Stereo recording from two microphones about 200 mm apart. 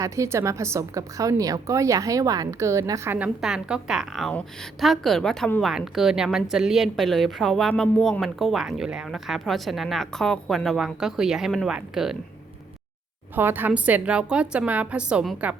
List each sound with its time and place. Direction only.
0.0 s a woman's voice: 15° right (ahead or behind)
13.3 s a woman's voice: 10° right (ahead or behind)